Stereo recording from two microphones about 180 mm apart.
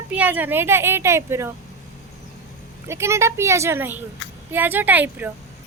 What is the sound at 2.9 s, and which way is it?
A woman's voice, 15° right (ahead or behind).